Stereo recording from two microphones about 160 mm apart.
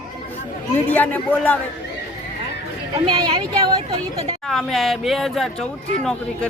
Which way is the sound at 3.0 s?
30° right (ahead or behind).